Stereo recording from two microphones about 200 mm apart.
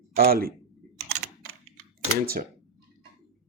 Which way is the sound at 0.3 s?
50° right (ahead or behind).